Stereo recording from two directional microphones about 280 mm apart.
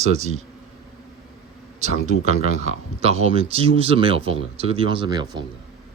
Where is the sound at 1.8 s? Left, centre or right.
Right.